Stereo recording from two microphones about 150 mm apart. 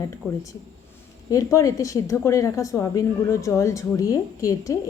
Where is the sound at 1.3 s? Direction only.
20° left (ahead or behind).